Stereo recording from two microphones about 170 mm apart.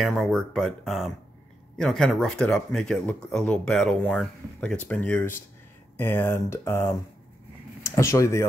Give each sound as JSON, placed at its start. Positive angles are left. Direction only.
{"t": 0.0, "sound": "speech", "side_deg": 0}